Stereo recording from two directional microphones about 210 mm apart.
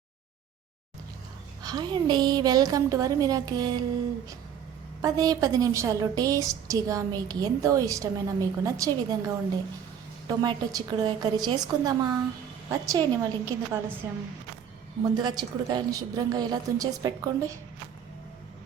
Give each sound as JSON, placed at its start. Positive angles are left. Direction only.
{"t": 1.6, "sound": "a woman's voice", "side_deg": -20}
{"t": 5.0, "sound": "a woman's voice", "side_deg": -15}